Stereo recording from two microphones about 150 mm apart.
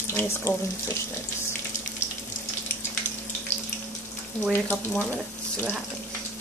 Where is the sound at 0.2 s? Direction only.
15° left (ahead or behind).